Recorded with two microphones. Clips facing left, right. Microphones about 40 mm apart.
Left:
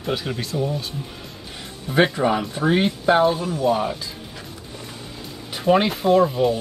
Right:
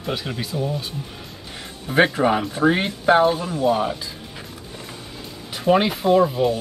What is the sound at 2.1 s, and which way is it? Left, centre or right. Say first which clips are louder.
Speech: right 1 dB; centre.